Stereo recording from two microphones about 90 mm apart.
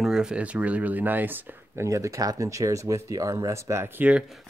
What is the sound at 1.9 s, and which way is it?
Speech, 35° right (ahead or behind).